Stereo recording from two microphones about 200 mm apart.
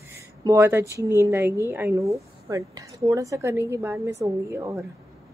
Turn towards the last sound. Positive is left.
turn(degrees=-15)  # may be behind; listen again after turning